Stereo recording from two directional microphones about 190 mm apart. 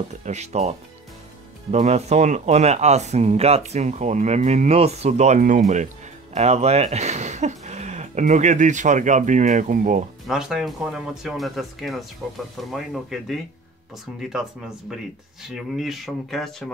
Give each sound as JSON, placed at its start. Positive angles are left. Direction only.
{"t": 0.2, "sound": "speech", "side_deg": -35}
{"t": 10.2, "sound": "speech", "side_deg": 0}
{"t": 15.5, "sound": "speech", "side_deg": 0}